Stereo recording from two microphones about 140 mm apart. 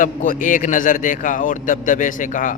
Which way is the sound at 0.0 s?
70° left (ahead or behind).